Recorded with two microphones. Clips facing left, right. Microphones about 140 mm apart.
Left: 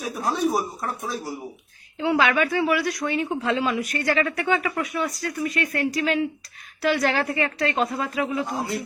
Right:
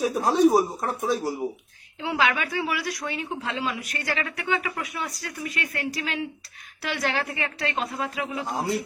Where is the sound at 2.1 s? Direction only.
55° left (ahead or behind).